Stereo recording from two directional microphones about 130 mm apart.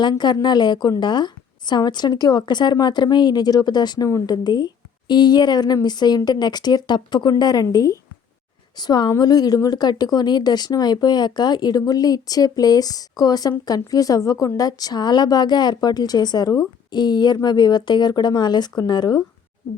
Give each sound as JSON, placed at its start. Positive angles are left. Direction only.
{"t": 0.0, "sound": "a woman's voice", "side_deg": 35}